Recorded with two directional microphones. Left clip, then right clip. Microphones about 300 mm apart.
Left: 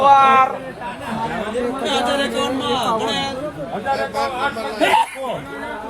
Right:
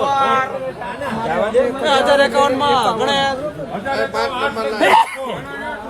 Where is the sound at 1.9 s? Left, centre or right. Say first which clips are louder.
Right 6 dB; centre.